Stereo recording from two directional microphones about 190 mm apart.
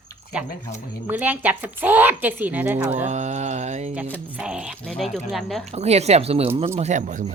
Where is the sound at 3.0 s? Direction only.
35° right (ahead or behind).